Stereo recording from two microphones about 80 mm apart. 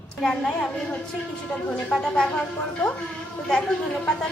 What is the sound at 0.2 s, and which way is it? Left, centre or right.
Speech, centre.